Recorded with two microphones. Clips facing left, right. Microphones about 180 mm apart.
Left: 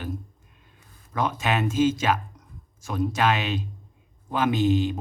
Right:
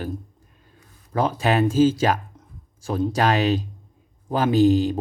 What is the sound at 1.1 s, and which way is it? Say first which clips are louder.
Speech: right 5 dB; 35° right (ahead or behind).